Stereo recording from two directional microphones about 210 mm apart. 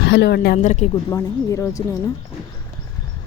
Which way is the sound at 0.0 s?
55° left (ahead or behind).